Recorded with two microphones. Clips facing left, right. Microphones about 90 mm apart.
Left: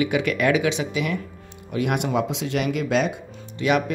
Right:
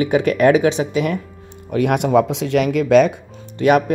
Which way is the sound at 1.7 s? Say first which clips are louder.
Right 7 dB; 50° right (ahead or behind).